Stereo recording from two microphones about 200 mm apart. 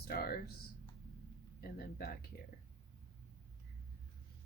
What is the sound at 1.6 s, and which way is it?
Speech, 50° left (ahead or behind).